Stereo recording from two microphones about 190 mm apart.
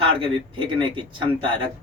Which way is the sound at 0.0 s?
25° right (ahead or behind).